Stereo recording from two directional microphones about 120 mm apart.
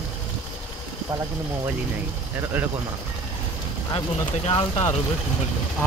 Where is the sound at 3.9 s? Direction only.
50° left (ahead or behind).